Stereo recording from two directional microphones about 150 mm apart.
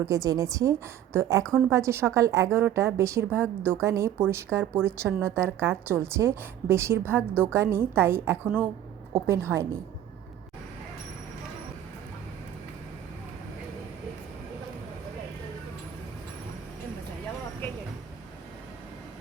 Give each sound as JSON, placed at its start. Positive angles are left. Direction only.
{"t": 0.0, "sound": "a woman's voice", "side_deg": -20}